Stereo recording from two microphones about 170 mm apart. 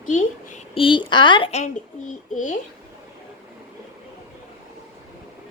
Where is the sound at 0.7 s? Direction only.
30° left (ahead or behind).